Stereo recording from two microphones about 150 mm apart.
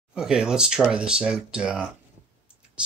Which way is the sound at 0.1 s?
5° right (ahead or behind).